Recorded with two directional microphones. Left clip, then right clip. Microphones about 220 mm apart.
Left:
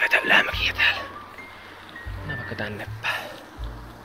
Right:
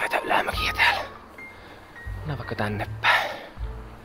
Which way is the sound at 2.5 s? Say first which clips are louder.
Right 3 dB; 40° right (ahead or behind).